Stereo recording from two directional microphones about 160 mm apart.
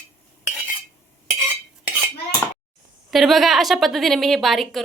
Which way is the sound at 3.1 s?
Centre (ahead or behind).